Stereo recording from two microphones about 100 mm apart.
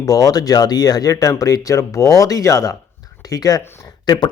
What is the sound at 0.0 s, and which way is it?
Speech, 35° left (ahead or behind).